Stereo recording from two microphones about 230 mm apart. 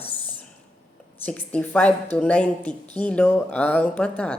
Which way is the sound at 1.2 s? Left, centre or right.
Centre.